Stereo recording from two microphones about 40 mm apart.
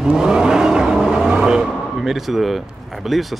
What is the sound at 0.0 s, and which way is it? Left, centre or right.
Vehicle, centre.